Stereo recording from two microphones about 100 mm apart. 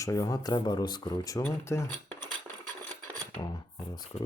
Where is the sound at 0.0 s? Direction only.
35° left (ahead or behind).